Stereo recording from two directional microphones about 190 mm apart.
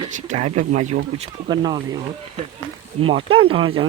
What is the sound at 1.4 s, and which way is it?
Speech, 25° right (ahead or behind).